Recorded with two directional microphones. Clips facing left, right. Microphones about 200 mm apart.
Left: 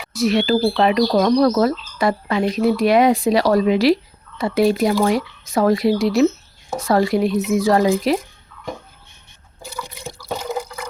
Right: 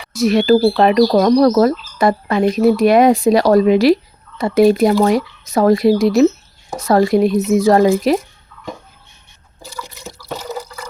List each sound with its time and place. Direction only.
0.1 s speech: 45° right (ahead or behind)
10.2 s drip: 15° left (ahead or behind)